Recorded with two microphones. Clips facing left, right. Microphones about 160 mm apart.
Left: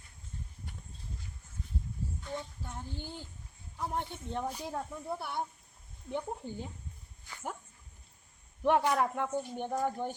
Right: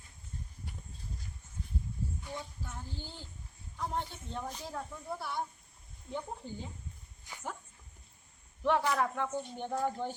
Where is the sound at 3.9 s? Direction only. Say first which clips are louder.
Left 4 dB; 20° left (ahead or behind).